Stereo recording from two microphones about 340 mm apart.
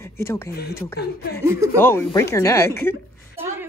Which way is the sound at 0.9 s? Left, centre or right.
Left.